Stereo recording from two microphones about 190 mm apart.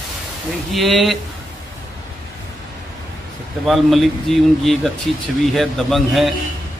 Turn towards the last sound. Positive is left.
turn(degrees=0)  # may be behind; listen again after turning